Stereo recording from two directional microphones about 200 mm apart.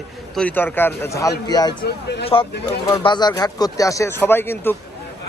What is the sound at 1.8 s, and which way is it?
Speech, 55° left (ahead or behind).